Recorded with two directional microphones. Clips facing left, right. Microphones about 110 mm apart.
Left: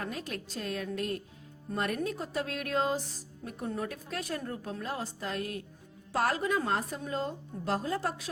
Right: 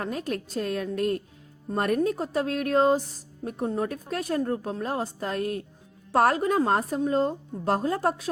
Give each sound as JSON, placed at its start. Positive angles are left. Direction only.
{"t": 0.0, "sound": "a woman's voice", "side_deg": -45}